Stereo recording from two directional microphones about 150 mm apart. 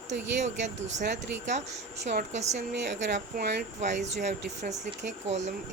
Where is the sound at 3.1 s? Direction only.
60° right (ahead or behind).